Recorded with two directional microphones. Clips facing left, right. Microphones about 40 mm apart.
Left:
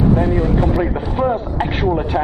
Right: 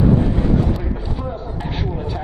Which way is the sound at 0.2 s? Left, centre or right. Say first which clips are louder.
Left 2 dB; left.